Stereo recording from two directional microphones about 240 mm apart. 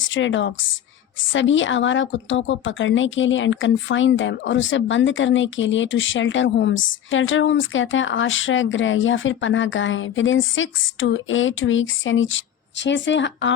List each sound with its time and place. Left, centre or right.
0.0 s a woman's voice: left